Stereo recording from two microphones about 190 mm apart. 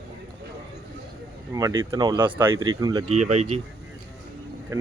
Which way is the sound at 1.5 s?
15° right (ahead or behind).